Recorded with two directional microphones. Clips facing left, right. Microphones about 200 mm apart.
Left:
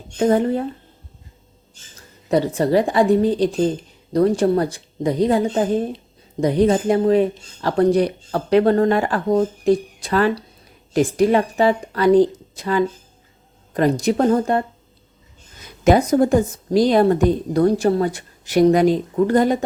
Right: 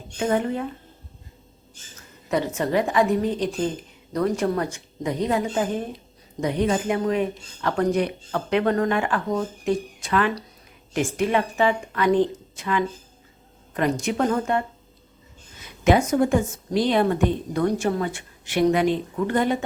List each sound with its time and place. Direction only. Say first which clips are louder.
0.2 s a woman's voice: left 6 dB; 35° left (ahead or behind)
2.0 s a woman's voice: left 6 dB; 35° left (ahead or behind)
15.8 s a woman's voice: left 4 dB; 35° left (ahead or behind)